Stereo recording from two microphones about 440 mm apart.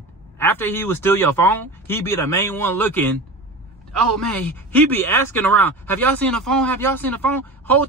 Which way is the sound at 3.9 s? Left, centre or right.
Right.